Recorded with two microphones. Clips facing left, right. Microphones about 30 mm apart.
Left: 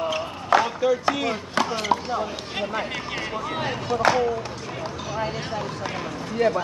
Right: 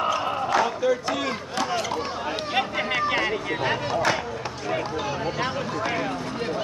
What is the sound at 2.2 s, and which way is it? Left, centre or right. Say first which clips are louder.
Speech: right 4 dB; right.